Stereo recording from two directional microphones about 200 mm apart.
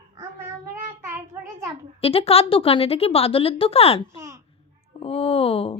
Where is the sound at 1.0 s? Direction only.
10° right (ahead or behind).